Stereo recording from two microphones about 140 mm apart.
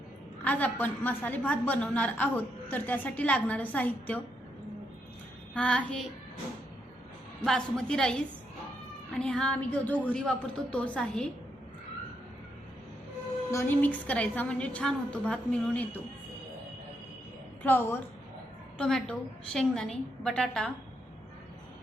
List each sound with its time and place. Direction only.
0.4 s a woman's voice: 10° left (ahead or behind)
5.5 s a woman's voice: 5° left (ahead or behind)
7.4 s a woman's voice: 5° left (ahead or behind)
13.5 s a woman's voice: 15° left (ahead or behind)
17.6 s a woman's voice: 15° left (ahead or behind)
18.8 s a woman's voice: 5° left (ahead or behind)